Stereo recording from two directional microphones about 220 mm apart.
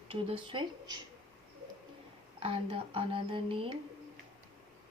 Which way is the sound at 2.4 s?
25° right (ahead or behind).